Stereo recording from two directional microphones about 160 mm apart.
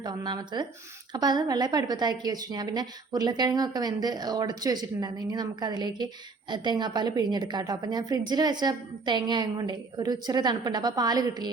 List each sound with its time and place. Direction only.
0.0 s a woman's voice: 25° right (ahead or behind)